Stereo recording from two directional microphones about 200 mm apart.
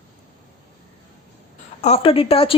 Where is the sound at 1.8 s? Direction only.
30° left (ahead or behind).